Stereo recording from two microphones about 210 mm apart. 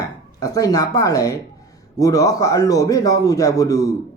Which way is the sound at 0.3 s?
15° left (ahead or behind).